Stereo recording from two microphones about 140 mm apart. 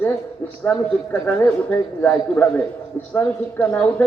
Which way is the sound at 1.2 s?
10° left (ahead or behind).